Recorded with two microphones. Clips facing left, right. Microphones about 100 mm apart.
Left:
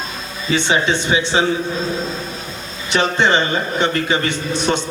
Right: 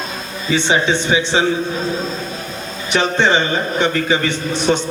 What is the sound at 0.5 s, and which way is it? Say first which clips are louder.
Speech: right 1 dB; 20° right (ahead or behind).